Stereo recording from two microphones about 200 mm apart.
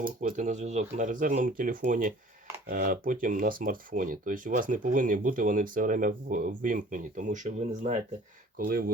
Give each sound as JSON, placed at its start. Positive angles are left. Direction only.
{"t": 0.0, "sound": "speech", "side_deg": -40}